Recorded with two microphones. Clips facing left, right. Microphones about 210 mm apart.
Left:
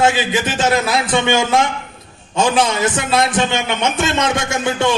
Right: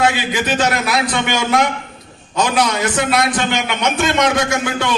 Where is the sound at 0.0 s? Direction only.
25° left (ahead or behind).